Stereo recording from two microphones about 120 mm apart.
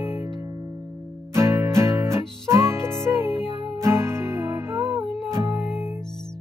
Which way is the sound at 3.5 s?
40° right (ahead or behind).